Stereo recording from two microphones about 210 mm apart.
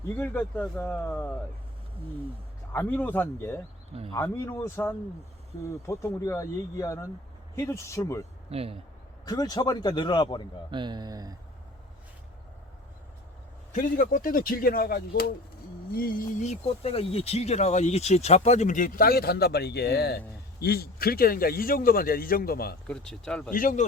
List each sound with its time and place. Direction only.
0.2 s speech: 5° left (ahead or behind)
2.7 s speech: 10° left (ahead or behind)
8.4 s speech: 30° right (ahead or behind)
9.2 s speech: 20° left (ahead or behind)
10.7 s speech: 20° right (ahead or behind)
13.7 s speech: 40° left (ahead or behind)
22.9 s speech: 5° left (ahead or behind)
23.5 s speech: 40° left (ahead or behind)